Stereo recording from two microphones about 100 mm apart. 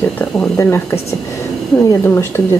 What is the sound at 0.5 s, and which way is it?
Speech, 25° left (ahead or behind).